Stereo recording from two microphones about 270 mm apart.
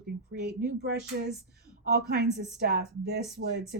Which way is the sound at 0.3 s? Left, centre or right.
Right.